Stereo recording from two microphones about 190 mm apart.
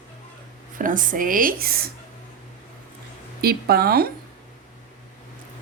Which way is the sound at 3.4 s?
55° right (ahead or behind).